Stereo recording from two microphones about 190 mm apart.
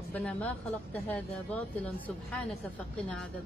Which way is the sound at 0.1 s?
5° left (ahead or behind).